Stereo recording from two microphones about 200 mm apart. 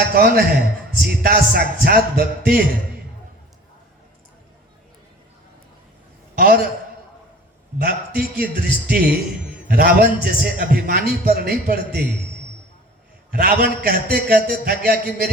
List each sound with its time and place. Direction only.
0.1 s a man's voice: 50° right (ahead or behind)
6.3 s a man's voice: 50° right (ahead or behind)
7.8 s a man's voice: 50° right (ahead or behind)
13.3 s a man's voice: 50° right (ahead or behind)